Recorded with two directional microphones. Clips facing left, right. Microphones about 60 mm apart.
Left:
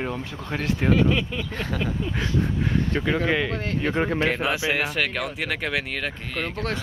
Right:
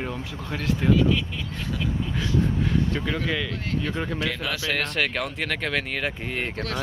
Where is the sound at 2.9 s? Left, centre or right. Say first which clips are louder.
Left 4 dB; left.